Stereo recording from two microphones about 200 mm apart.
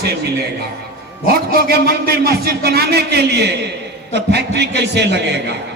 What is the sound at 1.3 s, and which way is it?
A man's voice, 50° right (ahead or behind).